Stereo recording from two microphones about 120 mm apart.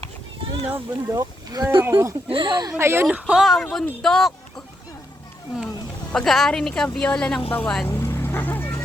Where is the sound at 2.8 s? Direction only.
20° right (ahead or behind).